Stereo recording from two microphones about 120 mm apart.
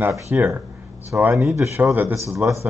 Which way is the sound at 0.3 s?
15° right (ahead or behind).